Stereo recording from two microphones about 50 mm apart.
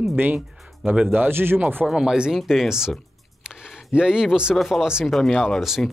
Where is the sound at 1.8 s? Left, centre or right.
Centre.